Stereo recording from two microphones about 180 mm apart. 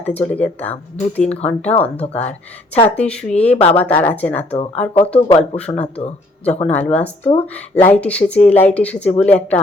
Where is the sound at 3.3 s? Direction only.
35° left (ahead or behind).